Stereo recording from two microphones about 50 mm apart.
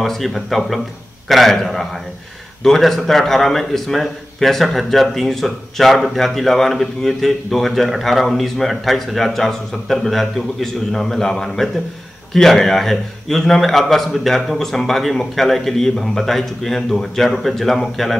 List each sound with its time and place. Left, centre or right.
0.0 s a man's voice: centre